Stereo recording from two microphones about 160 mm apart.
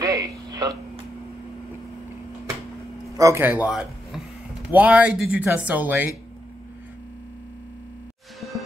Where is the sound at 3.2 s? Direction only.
15° right (ahead or behind).